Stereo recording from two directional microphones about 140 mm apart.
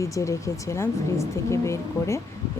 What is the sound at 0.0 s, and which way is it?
Speech, 20° left (ahead or behind).